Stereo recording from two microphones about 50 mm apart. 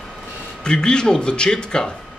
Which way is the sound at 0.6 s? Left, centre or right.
Centre.